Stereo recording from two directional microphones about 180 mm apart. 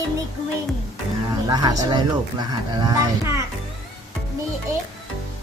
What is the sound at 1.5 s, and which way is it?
A child's voice, 20° right (ahead or behind).